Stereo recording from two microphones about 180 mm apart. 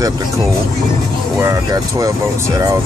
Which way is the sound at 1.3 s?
15° right (ahead or behind).